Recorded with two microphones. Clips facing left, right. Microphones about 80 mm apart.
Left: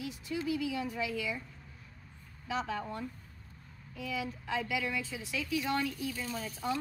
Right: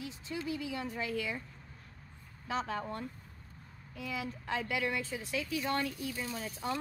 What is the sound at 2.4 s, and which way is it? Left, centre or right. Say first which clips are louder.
Speech: even; right.